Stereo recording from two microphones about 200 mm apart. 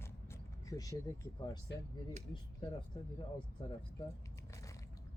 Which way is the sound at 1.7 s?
60° left (ahead or behind).